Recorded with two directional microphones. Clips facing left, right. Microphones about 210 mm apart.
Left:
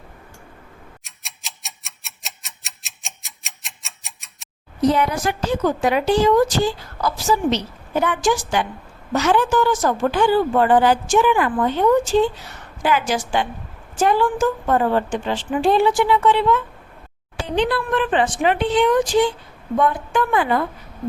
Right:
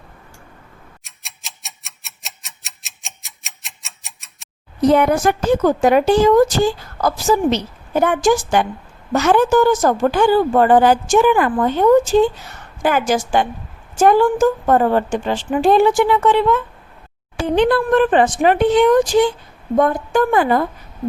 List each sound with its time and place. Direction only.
1.0 s tick-tock: centre (ahead or behind)
4.9 s a woman's voice: 55° right (ahead or behind)